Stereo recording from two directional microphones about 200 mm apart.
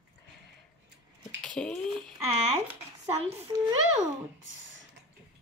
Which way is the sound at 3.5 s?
20° right (ahead or behind).